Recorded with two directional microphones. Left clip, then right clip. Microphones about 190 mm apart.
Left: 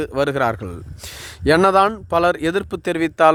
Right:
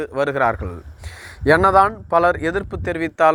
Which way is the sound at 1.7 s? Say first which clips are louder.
Right 1 dB; 45° left (ahead or behind).